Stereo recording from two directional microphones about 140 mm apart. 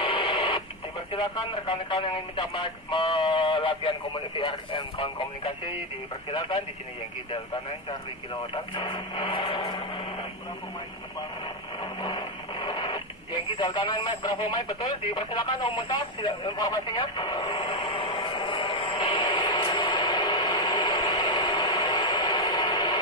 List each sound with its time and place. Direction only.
0.0 s radio: 40° left (ahead or behind)
1.1 s speech: 35° left (ahead or behind)
8.7 s speech: 35° left (ahead or behind)
11.8 s radio: 30° left (ahead or behind)